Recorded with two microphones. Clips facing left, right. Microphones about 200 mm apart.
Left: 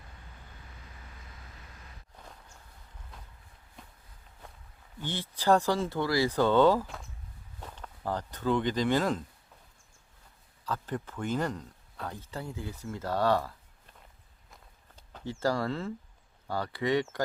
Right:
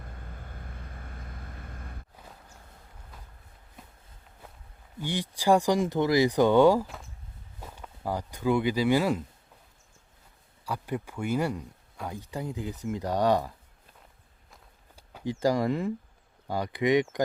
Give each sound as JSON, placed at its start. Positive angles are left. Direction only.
{"t": 0.0, "sound": "vehicle", "side_deg": -55}
{"t": 3.8, "sound": "walk", "side_deg": -5}
{"t": 4.9, "sound": "speech", "side_deg": -15}
{"t": 6.8, "sound": "a sound", "side_deg": 0}
{"t": 7.6, "sound": "speech", "side_deg": -10}
{"t": 10.7, "sound": "speech", "side_deg": -10}
{"t": 14.9, "sound": "speech", "side_deg": -10}